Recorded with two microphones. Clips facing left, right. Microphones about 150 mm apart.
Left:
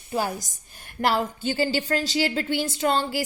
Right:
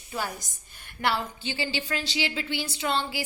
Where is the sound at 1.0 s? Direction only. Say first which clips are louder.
Left 5 dB; 45° left (ahead or behind).